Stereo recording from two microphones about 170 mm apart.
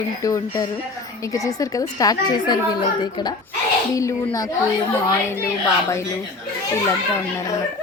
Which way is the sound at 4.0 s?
20° left (ahead or behind).